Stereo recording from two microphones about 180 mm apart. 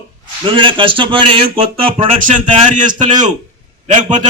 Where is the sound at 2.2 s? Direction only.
45° right (ahead or behind).